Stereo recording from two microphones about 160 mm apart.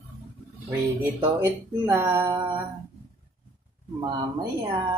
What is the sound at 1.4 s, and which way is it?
Speech, 15° right (ahead or behind).